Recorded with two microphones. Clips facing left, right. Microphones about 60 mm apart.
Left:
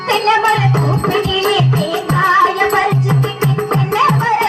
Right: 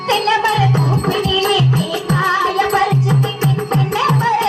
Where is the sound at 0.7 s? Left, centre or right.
Left.